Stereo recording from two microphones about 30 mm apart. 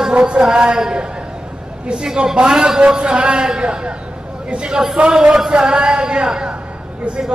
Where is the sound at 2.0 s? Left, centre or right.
Right.